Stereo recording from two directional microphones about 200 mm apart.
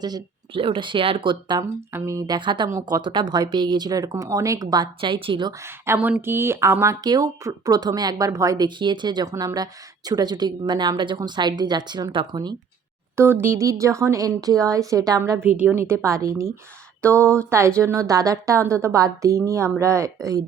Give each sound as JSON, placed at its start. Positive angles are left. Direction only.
{"t": 0.0, "sound": "speech", "side_deg": -25}
{"t": 17.2, "sound": "speech", "side_deg": 5}
{"t": 17.5, "sound": "speech", "side_deg": -15}